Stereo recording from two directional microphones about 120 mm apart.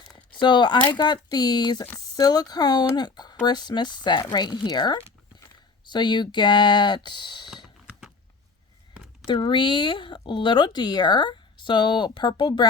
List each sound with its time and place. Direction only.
0.3 s speech: 40° left (ahead or behind)
7.5 s computer keyboard: centre (ahead or behind)
9.2 s speech: 40° left (ahead or behind)